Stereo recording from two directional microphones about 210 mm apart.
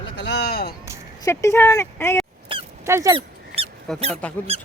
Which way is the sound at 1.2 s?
15° left (ahead or behind).